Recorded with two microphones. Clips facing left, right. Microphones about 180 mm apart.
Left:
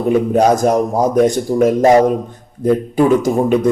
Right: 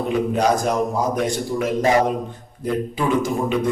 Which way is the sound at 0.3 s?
45° left (ahead or behind).